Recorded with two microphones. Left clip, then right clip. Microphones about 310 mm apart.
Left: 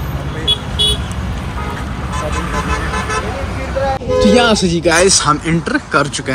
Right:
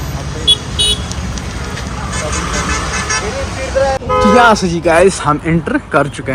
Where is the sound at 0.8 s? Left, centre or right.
Right.